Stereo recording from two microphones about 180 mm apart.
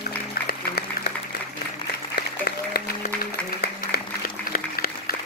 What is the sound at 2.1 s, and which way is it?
Applause, 60° left (ahead or behind).